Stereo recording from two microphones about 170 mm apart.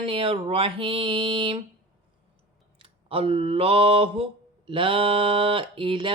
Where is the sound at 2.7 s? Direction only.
35° right (ahead or behind).